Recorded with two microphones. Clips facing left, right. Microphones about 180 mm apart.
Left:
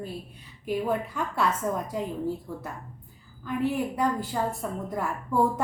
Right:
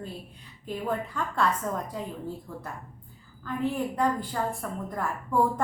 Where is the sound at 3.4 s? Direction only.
10° left (ahead or behind).